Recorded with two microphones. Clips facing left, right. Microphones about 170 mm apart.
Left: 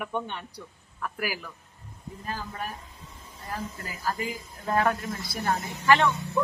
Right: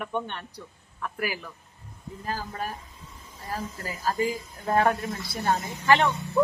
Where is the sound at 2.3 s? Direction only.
35° right (ahead or behind).